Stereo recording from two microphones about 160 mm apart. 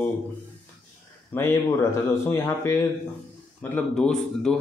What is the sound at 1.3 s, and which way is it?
Speech, 15° left (ahead or behind).